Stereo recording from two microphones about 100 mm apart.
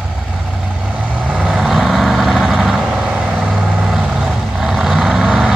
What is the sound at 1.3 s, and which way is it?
Vehicle, 5° right (ahead or behind).